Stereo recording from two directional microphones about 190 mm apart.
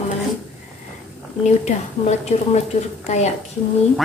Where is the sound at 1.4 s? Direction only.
35° left (ahead or behind).